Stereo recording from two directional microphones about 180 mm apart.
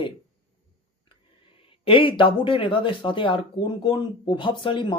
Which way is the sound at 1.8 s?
30° left (ahead or behind).